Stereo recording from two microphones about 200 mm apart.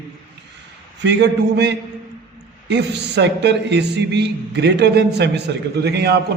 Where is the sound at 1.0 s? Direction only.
60° right (ahead or behind).